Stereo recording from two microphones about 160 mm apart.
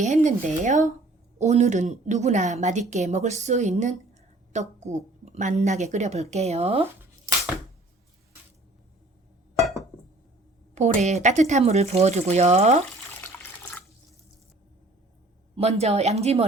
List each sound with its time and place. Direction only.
0.0 s a woman's voice: 50° right (ahead or behind)
10.8 s a woman's voice: 45° right (ahead or behind)
13.2 s water: 15° left (ahead or behind)
15.5 s speech: 40° right (ahead or behind)